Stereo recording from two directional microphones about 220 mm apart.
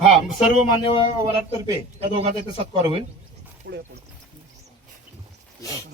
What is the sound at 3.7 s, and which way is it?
Speech, 50° right (ahead or behind).